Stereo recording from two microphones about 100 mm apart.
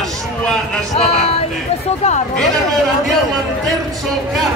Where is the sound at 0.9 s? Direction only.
90° left.